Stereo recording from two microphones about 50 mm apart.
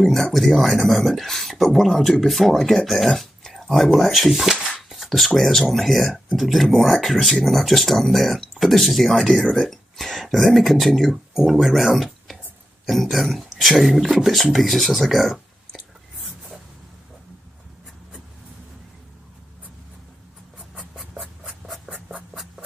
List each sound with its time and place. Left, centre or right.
0.0 s speech: centre
20.9 s a sound: centre
21.8 s writing: centre